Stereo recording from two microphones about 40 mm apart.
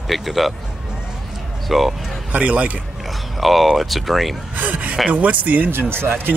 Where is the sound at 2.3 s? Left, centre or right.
Right.